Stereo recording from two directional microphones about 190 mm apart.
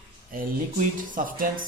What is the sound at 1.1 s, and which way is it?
Speech, 45° right (ahead or behind).